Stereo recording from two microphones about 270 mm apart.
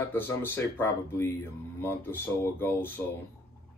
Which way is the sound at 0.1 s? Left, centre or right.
Centre.